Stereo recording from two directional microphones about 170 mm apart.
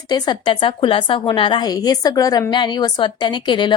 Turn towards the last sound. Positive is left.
turn(degrees=25)  # may be behind; listen again after turning